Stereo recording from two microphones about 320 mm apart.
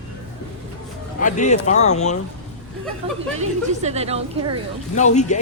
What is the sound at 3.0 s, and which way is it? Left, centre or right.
A woman's voice, centre.